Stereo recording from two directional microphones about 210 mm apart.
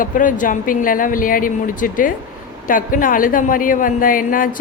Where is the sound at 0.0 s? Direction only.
40° left (ahead or behind).